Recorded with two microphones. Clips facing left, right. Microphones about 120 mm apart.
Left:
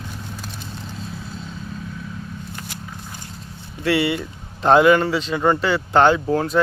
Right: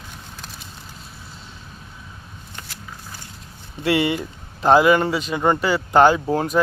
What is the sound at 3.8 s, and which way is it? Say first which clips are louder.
Speech: even; 20° right (ahead or behind).